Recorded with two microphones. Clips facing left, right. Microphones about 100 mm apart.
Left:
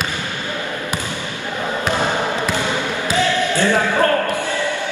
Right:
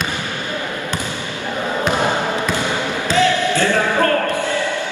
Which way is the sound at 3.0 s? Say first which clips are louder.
Right 3 dB; 15° left (ahead or behind).